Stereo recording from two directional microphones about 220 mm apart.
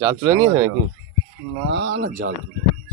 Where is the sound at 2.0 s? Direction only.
40° right (ahead or behind).